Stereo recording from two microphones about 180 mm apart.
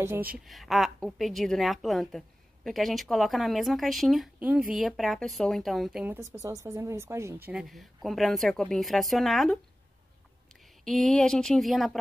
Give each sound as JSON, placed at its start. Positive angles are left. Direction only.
{"t": 0.0, "sound": "speech", "side_deg": -10}
{"t": 0.5, "sound": "a woman's voice", "side_deg": 0}
{"t": 6.3, "sound": "speech", "side_deg": -15}
{"t": 7.4, "sound": "a woman's voice", "side_deg": 0}
{"t": 10.8, "sound": "a woman's voice", "side_deg": 0}